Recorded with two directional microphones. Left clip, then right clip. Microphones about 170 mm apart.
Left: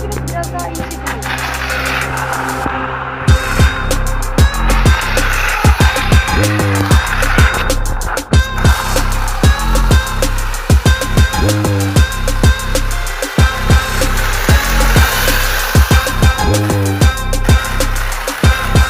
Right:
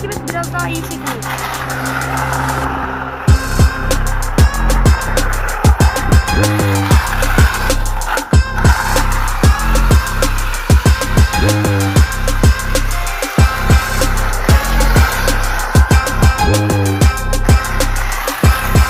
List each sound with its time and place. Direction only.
2.0 s music: centre (ahead or behind)
4.4 s music: centre (ahead or behind)
5.8 s music: 20° left (ahead or behind)
6.4 s music: centre (ahead or behind)